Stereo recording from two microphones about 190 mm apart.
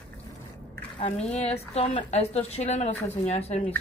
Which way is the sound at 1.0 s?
35° left (ahead or behind).